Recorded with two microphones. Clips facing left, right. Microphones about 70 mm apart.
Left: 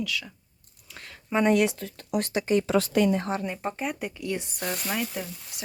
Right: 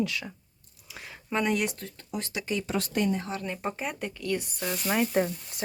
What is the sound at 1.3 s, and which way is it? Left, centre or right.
Speech, centre.